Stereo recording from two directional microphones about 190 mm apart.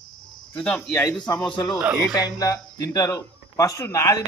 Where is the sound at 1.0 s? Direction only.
20° left (ahead or behind).